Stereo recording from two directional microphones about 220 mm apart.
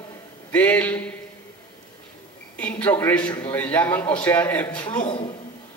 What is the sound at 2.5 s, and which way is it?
A man's voice, 5° left (ahead or behind).